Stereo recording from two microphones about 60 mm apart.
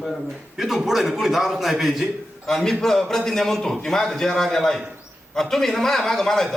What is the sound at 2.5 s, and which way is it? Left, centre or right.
A man's voice, centre.